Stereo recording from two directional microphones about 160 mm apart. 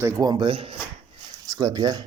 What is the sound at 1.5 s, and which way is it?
Speech, 20° right (ahead or behind).